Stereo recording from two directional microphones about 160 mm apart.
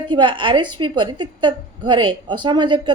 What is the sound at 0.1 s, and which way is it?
A woman's voice, 30° right (ahead or behind).